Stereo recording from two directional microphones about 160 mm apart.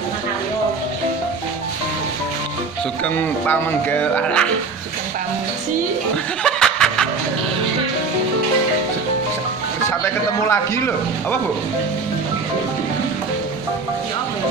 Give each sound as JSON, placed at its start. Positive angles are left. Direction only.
{"t": 4.1, "sound": "a man's voice", "side_deg": 5}
{"t": 6.4, "sound": "chuckle", "side_deg": 5}
{"t": 10.4, "sound": "a man's voice", "side_deg": 20}